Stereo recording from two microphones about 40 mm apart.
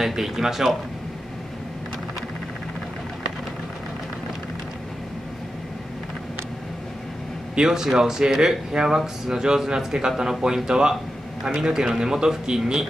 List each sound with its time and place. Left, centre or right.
0.0 s speech: centre
7.5 s speech: centre